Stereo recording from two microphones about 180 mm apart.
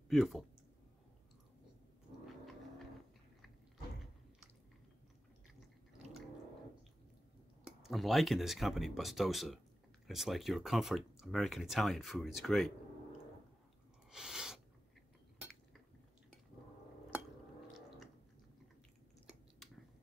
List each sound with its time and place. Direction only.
0.1 s speech: centre (ahead or behind)
7.8 s speech: centre (ahead or behind)
14.1 s a sound: 5° right (ahead or behind)
17.8 s chewing: centre (ahead or behind)